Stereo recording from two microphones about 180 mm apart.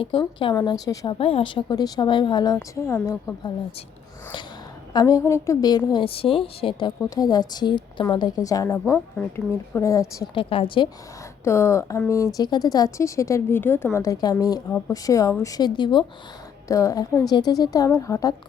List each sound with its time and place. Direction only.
0.0 s a woman's voice: 30° left (ahead or behind)
4.9 s a woman's voice: 20° left (ahead or behind)
10.3 s a woman's voice: 30° left (ahead or behind)
11.4 s a woman's voice: 15° left (ahead or behind)